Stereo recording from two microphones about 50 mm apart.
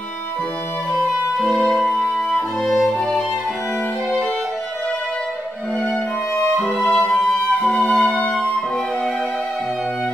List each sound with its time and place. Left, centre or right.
1.7 s music: centre
2.7 s violin: centre
6.7 s music: centre